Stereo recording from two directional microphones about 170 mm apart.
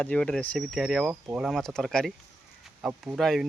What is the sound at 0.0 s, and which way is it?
Speech, 5° left (ahead or behind).